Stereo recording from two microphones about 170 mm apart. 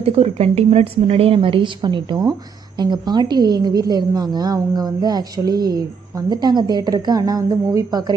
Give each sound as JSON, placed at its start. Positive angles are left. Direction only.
{"t": 0.0, "sound": "a woman's voice", "side_deg": -35}